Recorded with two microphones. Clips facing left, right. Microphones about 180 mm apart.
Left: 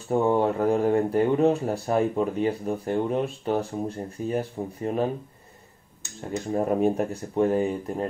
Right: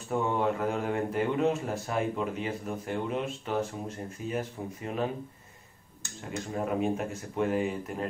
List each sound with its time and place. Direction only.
0.1 s speech: 35° left (ahead or behind)
6.5 s speech: 40° left (ahead or behind)